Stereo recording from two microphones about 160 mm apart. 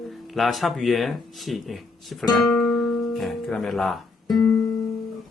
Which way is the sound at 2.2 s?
Centre (ahead or behind).